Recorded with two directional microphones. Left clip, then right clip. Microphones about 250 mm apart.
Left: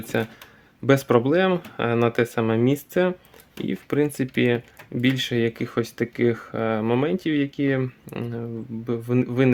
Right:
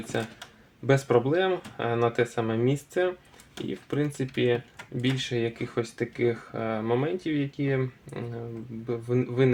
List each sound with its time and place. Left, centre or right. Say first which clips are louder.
0.1 s speech: left 6 dB; left